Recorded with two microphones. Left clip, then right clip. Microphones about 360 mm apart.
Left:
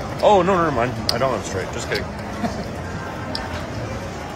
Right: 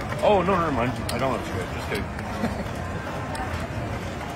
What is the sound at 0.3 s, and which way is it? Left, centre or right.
Speech, left.